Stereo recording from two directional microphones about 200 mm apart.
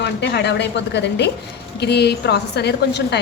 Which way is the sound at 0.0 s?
60° left (ahead or behind).